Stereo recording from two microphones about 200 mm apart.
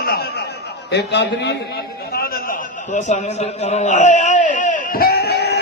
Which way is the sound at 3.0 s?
35° left (ahead or behind).